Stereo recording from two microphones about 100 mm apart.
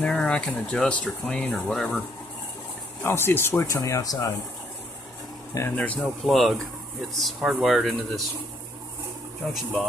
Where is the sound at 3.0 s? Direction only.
25° left (ahead or behind).